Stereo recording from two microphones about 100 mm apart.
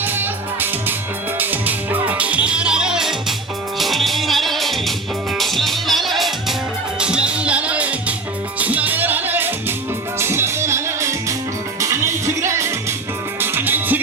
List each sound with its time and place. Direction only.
0.0 s music: 20° right (ahead or behind)